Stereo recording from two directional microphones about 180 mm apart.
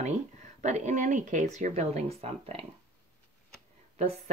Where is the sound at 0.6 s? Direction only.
40° right (ahead or behind).